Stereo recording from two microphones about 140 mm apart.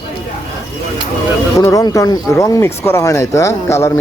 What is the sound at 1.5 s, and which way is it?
Speech, 25° left (ahead or behind).